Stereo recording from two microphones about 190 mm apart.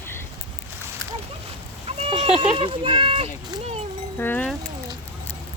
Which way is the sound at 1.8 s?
30° right (ahead or behind).